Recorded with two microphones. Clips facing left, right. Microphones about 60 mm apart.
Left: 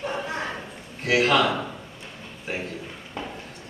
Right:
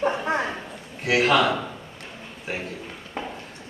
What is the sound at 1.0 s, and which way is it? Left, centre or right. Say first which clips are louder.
Speech: right 1 dB; centre.